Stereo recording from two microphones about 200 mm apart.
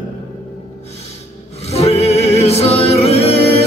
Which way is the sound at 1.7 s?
30° left (ahead or behind).